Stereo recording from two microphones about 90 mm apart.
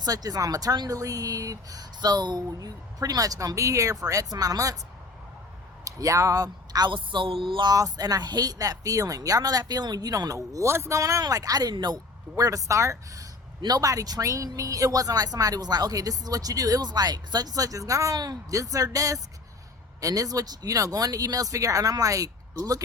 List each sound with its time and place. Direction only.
0.0 s speech: 45° right (ahead or behind)
5.8 s speech: 35° right (ahead or behind)
6.9 s a sound: 65° right (ahead or behind)
7.7 s a woman's voice: 45° right (ahead or behind)
12.4 s speech: 40° right (ahead or behind)
13.6 s a woman's voice: 45° right (ahead or behind)